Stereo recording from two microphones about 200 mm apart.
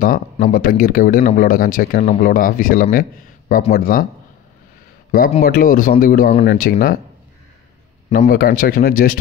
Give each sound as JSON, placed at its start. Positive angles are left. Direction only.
{"t": 0.0, "sound": "speech", "side_deg": 45}
{"t": 5.4, "sound": "speech", "side_deg": 45}
{"t": 8.1, "sound": "speech", "side_deg": 45}